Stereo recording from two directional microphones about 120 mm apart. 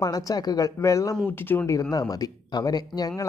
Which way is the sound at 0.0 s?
30° left (ahead or behind).